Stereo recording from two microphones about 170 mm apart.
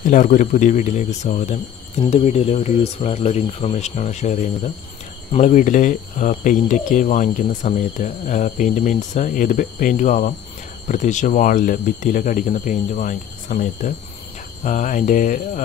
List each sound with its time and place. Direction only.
0.0 s speech: 45° left (ahead or behind)